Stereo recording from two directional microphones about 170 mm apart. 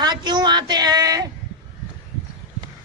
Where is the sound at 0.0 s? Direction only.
25° right (ahead or behind).